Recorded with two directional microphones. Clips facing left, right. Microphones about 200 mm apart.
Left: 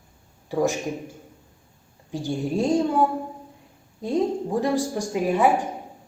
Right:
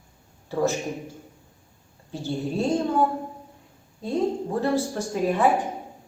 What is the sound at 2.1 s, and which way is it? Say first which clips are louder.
Speech: left 2 dB; 15° left (ahead or behind).